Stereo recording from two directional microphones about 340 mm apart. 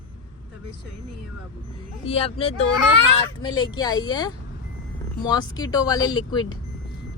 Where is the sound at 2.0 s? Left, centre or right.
Centre.